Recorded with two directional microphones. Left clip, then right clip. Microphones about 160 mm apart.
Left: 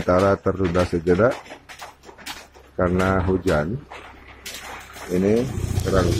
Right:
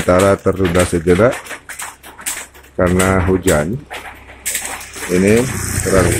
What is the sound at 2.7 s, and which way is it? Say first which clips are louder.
Speech: right 6 dB; 15° right (ahead or behind).